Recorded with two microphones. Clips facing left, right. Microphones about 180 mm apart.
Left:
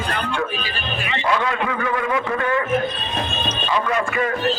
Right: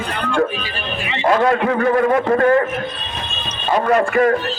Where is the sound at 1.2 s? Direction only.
45° right (ahead or behind).